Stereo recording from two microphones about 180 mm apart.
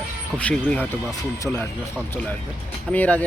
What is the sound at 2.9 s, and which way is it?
Speech, 10° left (ahead or behind).